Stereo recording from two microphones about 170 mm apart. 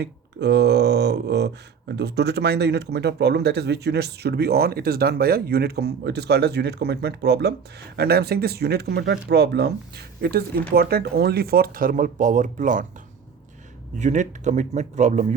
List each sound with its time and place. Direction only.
0.0 s speech: 80° right; by 12.8 s 50° right (ahead or behind)
14.0 s speech: 45° right (ahead or behind)